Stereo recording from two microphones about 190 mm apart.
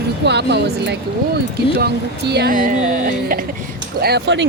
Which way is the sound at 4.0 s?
60° right (ahead or behind).